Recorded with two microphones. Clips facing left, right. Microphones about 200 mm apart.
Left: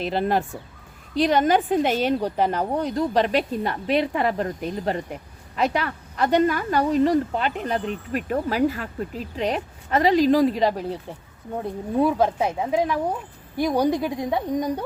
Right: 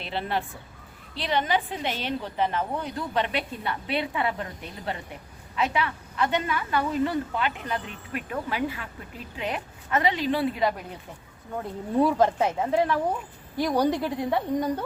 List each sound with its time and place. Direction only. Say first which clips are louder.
0.0 s speech: left 7 dB; 45° left (ahead or behind)
11.9 s speech: left 1 dB; 10° left (ahead or behind)